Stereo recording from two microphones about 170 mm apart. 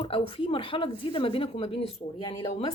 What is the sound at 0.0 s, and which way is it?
A woman's voice, 30° left (ahead or behind).